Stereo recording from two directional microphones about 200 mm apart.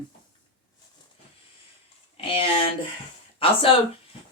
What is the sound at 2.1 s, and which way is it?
Speech, 25° left (ahead or behind).